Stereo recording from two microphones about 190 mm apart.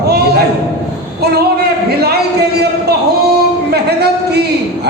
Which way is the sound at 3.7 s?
60° right (ahead or behind).